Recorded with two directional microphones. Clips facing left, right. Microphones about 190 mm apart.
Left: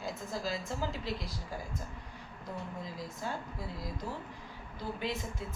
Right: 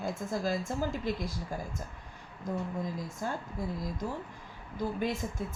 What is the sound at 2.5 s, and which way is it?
Speech, 45° right (ahead or behind).